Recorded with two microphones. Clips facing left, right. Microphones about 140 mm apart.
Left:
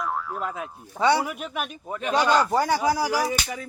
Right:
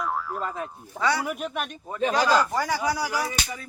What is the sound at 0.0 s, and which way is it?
Speech, centre (ahead or behind).